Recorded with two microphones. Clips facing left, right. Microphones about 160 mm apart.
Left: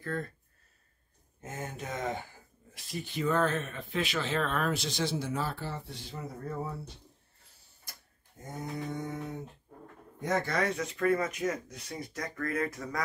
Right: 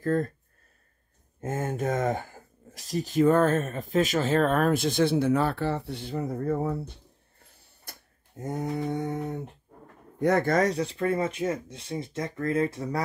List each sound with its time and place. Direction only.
0.0 s speech: 40° right (ahead or behind)
1.4 s speech: 50° right (ahead or behind)
7.9 s tick-tock: 60° right (ahead or behind)
8.4 s a sound: 70° right (ahead or behind)
10.1 s speech: 65° right (ahead or behind); by 13.0 s 30° right (ahead or behind)